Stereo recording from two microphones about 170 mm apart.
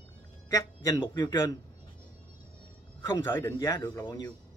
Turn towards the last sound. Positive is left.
turn(degrees=20)  # may be behind; listen again after turning